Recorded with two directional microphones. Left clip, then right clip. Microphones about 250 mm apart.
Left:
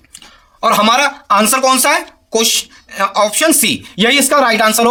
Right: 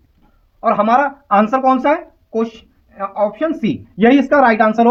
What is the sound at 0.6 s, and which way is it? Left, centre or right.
Speech, left.